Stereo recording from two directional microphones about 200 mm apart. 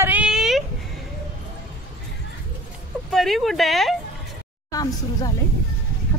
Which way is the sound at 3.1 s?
Centre (ahead or behind).